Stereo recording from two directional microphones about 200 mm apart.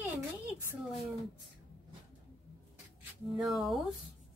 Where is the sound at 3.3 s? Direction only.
Centre (ahead or behind).